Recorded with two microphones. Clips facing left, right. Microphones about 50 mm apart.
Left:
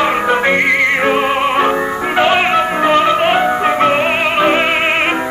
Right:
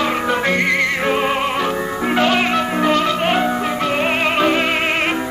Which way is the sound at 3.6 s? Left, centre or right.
Left.